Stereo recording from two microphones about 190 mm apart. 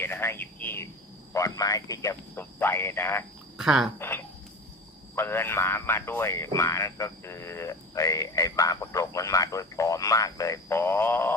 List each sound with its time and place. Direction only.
0.0 s speech: 10° left (ahead or behind)
3.6 s speech: 5° right (ahead or behind)
3.9 s speech: 10° left (ahead or behind)